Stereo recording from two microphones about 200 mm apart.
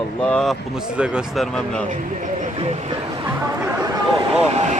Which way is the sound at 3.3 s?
15° right (ahead or behind).